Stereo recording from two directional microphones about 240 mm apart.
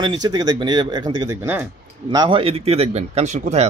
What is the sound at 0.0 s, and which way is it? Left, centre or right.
Speech, centre.